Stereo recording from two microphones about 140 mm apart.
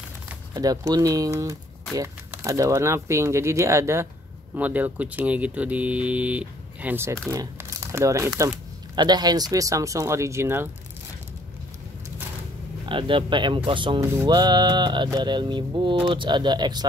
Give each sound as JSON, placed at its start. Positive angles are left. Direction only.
{"t": 0.6, "sound": "speech", "side_deg": -25}
{"t": 12.8, "sound": "a man's voice", "side_deg": -35}
{"t": 14.0, "sound": "speech", "side_deg": -20}